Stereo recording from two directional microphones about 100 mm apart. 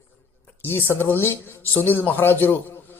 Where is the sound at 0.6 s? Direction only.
20° left (ahead or behind).